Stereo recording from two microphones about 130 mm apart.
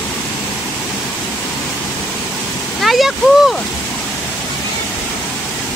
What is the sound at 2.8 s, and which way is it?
Speech, centre (ahead or behind).